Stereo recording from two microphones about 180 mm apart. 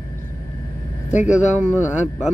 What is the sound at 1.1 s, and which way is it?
Speech, 40° left (ahead or behind).